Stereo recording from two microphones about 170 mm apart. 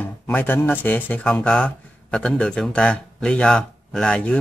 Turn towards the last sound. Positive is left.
turn(degrees=5)  # may be behind; listen again after turning